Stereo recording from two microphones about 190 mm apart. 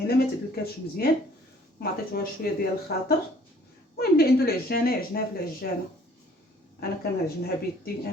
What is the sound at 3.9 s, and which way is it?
Speech, 55° left (ahead or behind).